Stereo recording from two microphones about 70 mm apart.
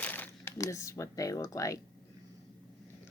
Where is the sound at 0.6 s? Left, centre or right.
Left.